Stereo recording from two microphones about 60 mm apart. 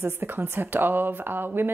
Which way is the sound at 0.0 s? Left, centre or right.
Right.